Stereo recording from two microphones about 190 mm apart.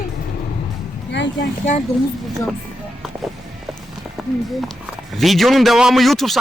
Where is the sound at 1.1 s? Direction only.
70° left (ahead or behind).